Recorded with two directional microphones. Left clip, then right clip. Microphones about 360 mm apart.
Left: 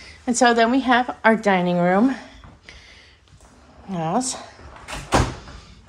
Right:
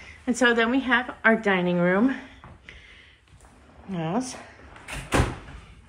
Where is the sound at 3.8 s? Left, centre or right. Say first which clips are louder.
Left 6 dB; centre.